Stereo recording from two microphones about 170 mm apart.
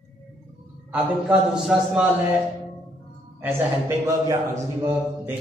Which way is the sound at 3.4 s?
15° right (ahead or behind).